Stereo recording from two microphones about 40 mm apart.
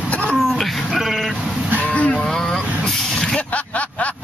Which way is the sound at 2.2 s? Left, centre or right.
Centre.